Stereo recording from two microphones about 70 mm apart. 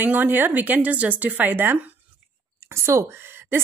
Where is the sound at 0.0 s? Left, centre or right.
Right.